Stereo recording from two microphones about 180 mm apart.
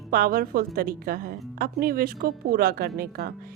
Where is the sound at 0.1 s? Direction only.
50° right (ahead or behind).